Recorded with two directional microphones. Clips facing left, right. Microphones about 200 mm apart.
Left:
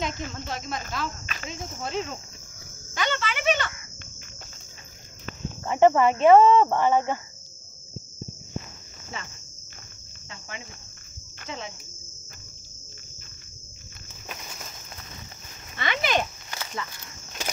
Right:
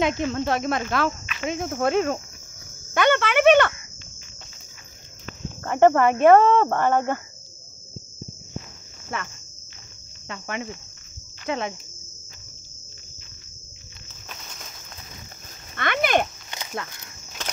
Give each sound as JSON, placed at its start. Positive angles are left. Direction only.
{"t": 0.0, "sound": "speech", "side_deg": -65}
{"t": 2.9, "sound": "cricket", "side_deg": -60}
{"t": 5.6, "sound": "speech", "side_deg": -55}
{"t": 9.1, "sound": "speech", "side_deg": -60}
{"t": 10.2, "sound": "cricket", "side_deg": -70}
{"t": 11.4, "sound": "speech", "side_deg": -65}
{"t": 14.3, "sound": "insect", "side_deg": 5}
{"t": 15.7, "sound": "cricket", "side_deg": -55}
{"t": 17.4, "sound": "walk", "side_deg": 10}